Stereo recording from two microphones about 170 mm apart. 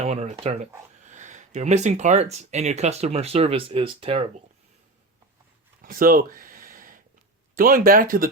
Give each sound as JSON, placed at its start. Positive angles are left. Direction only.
{"t": 0.0, "sound": "speech", "side_deg": -40}
{"t": 5.8, "sound": "a sound", "side_deg": -55}
{"t": 7.5, "sound": "speech", "side_deg": -55}